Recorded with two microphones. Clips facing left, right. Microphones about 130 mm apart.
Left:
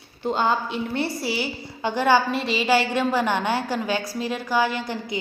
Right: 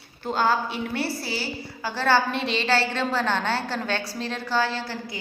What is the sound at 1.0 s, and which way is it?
A woman's voice, 20° left (ahead or behind).